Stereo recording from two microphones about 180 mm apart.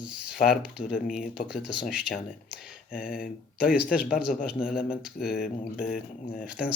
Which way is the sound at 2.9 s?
55° left (ahead or behind).